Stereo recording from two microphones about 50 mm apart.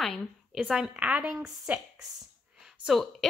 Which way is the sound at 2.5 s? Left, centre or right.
Centre.